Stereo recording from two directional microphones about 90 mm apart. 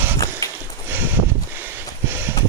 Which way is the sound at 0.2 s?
40° left (ahead or behind).